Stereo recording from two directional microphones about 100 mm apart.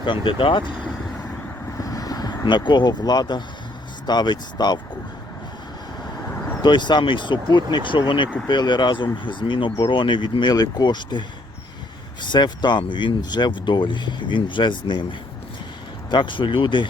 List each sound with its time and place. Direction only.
0.0 s speech: 55° left (ahead or behind)
1.8 s vehicle: 40° left (ahead or behind)
2.4 s speech: 50° left (ahead or behind)
6.6 s speech: 50° left (ahead or behind)
12.2 s speech: 50° left (ahead or behind)
16.0 s speech: 50° left (ahead or behind)